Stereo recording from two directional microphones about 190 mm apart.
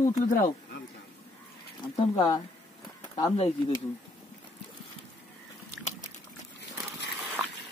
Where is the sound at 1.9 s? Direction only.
20° left (ahead or behind).